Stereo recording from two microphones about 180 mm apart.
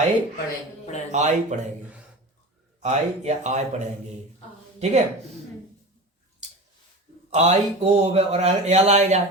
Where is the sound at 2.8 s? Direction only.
40° right (ahead or behind).